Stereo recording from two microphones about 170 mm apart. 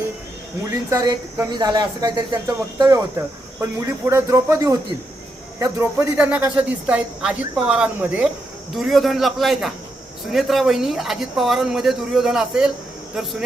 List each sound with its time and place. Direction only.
0.7 s a man's voice: 20° right (ahead or behind); by 12.7 s 5° right (ahead or behind)